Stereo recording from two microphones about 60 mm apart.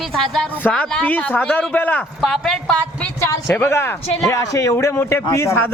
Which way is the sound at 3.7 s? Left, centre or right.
Left.